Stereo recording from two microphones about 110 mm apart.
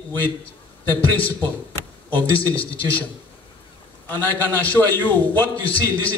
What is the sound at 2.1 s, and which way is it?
Speech, 15° left (ahead or behind).